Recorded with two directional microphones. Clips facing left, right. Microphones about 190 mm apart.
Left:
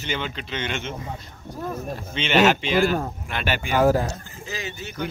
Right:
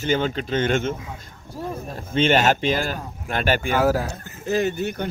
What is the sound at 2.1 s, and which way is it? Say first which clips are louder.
Speech: right 1 dB; 45° right (ahead or behind).